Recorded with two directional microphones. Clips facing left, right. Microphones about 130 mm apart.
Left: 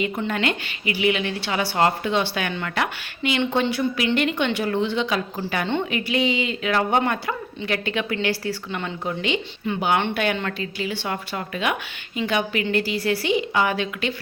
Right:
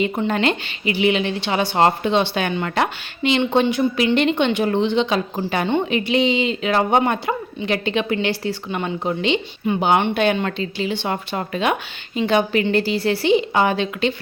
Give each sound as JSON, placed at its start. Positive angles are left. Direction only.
{"t": 0.0, "sound": "speech", "side_deg": -25}